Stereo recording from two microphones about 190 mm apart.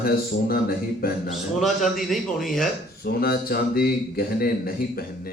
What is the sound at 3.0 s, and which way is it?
Speech, 55° left (ahead or behind).